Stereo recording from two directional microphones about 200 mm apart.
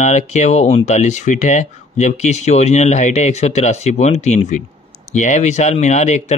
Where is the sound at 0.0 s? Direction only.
35° left (ahead or behind).